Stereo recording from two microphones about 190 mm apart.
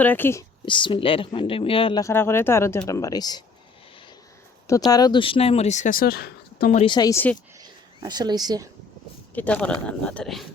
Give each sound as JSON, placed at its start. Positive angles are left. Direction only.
{"t": 0.0, "sound": "speech", "side_deg": 10}
{"t": 0.6, "sound": "speech", "side_deg": 25}
{"t": 4.9, "sound": "speech", "side_deg": 20}
{"t": 6.8, "sound": "speech", "side_deg": 20}
{"t": 7.6, "sound": "a sound", "side_deg": -20}
{"t": 9.3, "sound": "speech", "side_deg": 5}